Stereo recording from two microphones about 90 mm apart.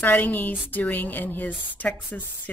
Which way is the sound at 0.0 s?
20° left (ahead or behind).